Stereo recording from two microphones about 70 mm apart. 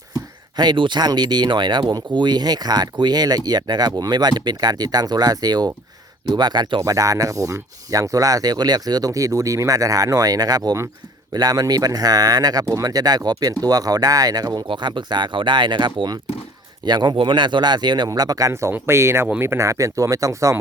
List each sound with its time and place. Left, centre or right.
0.5 s speech: right
6.2 s speech: right
6.8 s speech: right
12.6 s speech: right
13.3 s speech: right
18.7 s speech: right